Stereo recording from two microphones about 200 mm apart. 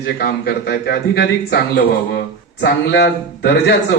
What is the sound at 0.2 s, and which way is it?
A man's voice, 50° left (ahead or behind).